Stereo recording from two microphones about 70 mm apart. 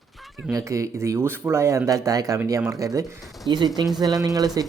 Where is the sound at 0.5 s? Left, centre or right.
Right.